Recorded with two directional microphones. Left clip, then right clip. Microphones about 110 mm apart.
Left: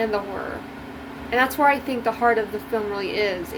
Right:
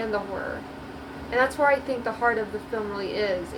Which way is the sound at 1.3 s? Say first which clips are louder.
Left 3 dB; 60° left (ahead or behind).